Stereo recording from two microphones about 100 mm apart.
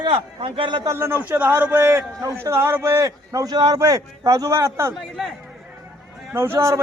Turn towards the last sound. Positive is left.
turn(degrees=-30)  # may be behind; listen again after turning